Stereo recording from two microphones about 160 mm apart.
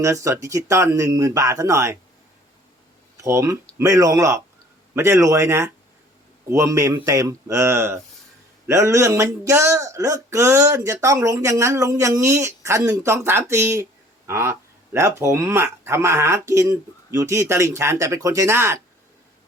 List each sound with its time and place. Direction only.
0.0 s speech: 20° right (ahead or behind)
3.2 s speech: 20° right (ahead or behind)